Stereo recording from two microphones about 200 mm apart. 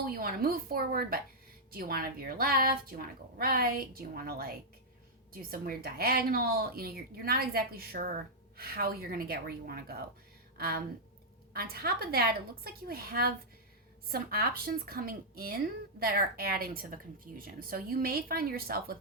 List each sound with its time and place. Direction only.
0.0 s a woman's voice: 45° right (ahead or behind)